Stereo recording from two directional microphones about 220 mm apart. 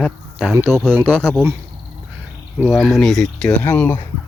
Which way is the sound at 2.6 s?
Centre (ahead or behind).